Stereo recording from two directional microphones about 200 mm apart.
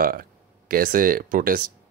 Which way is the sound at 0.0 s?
45° right (ahead or behind).